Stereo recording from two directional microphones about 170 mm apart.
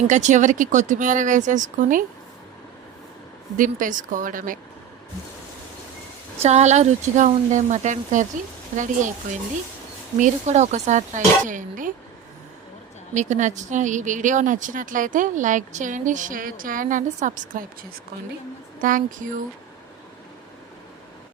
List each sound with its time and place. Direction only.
0.1 s a woman's voice: 45° right (ahead or behind)
3.6 s a woman's voice: 50° right (ahead or behind)
6.4 s a woman's voice: 40° right (ahead or behind)
10.2 s a woman's voice: 45° right (ahead or behind)
13.1 s a woman's voice: 45° right (ahead or behind)
18.8 s a woman's voice: 50° right (ahead or behind)